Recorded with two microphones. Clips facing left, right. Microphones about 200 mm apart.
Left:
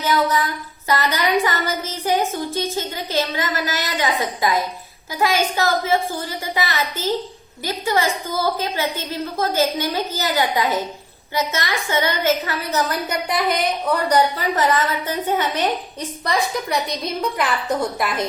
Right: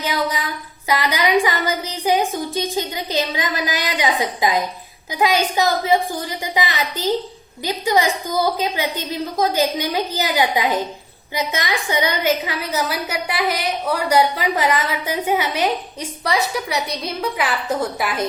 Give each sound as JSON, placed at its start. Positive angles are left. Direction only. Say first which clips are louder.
{"t": 0.0, "sound": "female singing", "louder": "left 3 dB", "side_deg": -15}
{"t": 0.9, "sound": "a woman's voice", "louder": "right 1 dB", "side_deg": -10}